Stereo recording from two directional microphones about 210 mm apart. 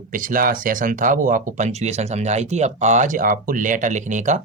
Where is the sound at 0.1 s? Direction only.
40° right (ahead or behind).